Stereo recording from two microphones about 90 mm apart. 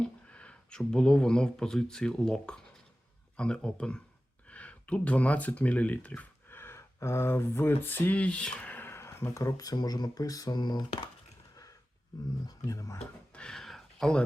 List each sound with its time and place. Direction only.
0.0 s a man's voice: 15° left (ahead or behind); by 10.8 s 50° left (ahead or behind)
12.5 s speech: 40° left (ahead or behind)
13.3 s a sound: 10° left (ahead or behind)